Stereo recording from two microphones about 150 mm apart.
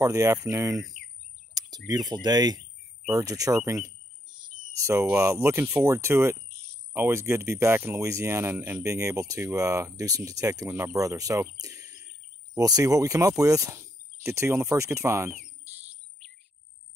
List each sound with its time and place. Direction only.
0.0 s speech: 20° right (ahead or behind)
1.9 s speech: 25° right (ahead or behind)
4.4 s cricket: 20° right (ahead or behind)
5.1 s speech: 20° right (ahead or behind)
11.6 s a sound: 25° right (ahead or behind)
12.5 s speech: 25° right (ahead or behind)